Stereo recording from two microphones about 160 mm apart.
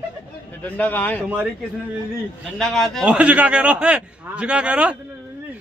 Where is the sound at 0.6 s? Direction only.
10° left (ahead or behind).